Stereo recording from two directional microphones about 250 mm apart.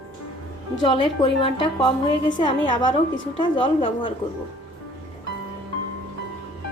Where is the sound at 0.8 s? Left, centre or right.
Centre.